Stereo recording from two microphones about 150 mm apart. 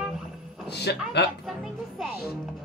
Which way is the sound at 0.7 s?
90° left.